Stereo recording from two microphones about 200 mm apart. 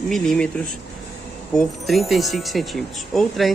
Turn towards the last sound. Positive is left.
turn(degrees=0)  # may be behind; listen again after turning